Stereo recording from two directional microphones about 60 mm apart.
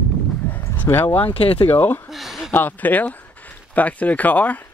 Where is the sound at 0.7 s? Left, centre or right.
Left.